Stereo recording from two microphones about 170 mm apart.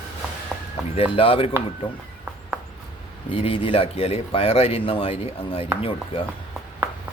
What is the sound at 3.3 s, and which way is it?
Speech, 30° left (ahead or behind).